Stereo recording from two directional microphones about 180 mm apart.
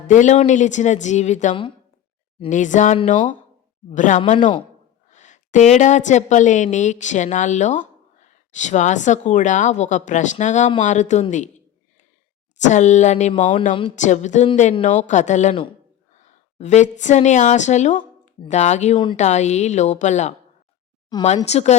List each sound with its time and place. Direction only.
0.1 s a woman's voice: 40° left (ahead or behind)
12.6 s a woman's voice: 40° left (ahead or behind)
21.5 s a woman's voice: 40° left (ahead or behind)